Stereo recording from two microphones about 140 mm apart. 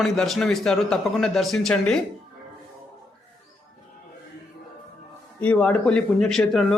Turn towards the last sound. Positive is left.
turn(degrees=5)  # may be behind; listen again after turning